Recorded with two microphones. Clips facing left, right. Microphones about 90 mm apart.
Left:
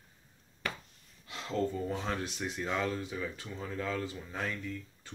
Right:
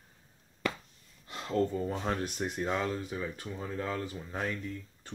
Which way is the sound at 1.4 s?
40° right (ahead or behind).